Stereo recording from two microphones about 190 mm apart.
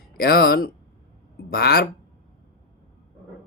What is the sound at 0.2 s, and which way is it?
Speech, 55° left (ahead or behind).